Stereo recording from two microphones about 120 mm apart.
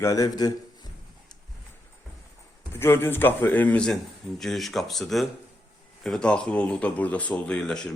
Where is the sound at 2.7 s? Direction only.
20° left (ahead or behind).